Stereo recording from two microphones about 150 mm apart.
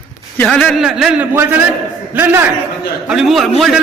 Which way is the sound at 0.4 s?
5° left (ahead or behind).